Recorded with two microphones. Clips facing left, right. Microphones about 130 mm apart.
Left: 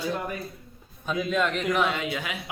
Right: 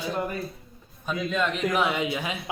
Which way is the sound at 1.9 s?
20° right (ahead or behind).